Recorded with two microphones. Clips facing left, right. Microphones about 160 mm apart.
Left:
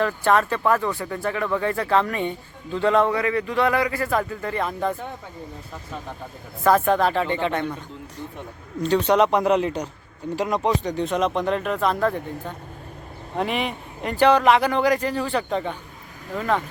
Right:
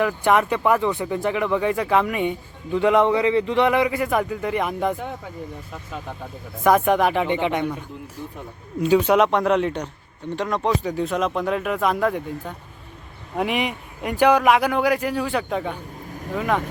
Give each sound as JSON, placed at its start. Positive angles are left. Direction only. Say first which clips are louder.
{"t": 0.0, "sound": "a man's voice", "louder": "right 1 dB", "side_deg": -15}
{"t": 6.7, "sound": "a man's voice", "louder": "right 1 dB", "side_deg": -15}
{"t": 8.8, "sound": "a man's voice", "louder": "right 2 dB", "side_deg": -10}